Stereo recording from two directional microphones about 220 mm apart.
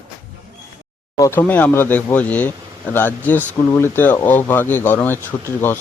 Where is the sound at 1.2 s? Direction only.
10° left (ahead or behind).